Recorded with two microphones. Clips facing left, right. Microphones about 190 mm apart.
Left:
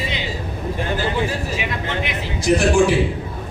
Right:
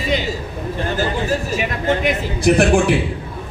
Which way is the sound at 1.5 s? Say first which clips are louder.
Right 5 dB; 45° right (ahead or behind).